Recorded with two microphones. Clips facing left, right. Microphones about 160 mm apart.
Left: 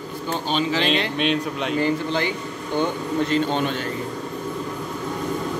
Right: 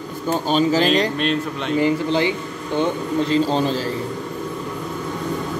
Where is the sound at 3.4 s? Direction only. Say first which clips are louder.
Right 3 dB; 35° right (ahead or behind).